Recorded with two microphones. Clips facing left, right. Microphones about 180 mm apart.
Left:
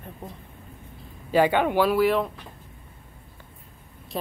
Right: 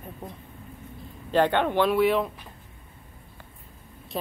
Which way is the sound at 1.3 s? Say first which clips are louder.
Left 2 dB; 10° left (ahead or behind).